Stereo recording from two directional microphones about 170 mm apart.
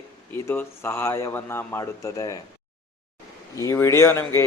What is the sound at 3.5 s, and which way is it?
Speech, 15° left (ahead or behind).